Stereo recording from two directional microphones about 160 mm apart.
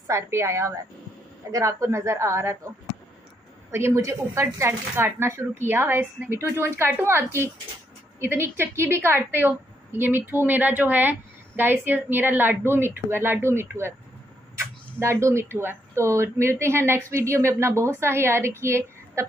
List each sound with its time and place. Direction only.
0.0 s a woman's voice: 15° right (ahead or behind)
3.7 s a woman's voice: 15° right (ahead or behind)
15.0 s a woman's voice: 15° right (ahead or behind)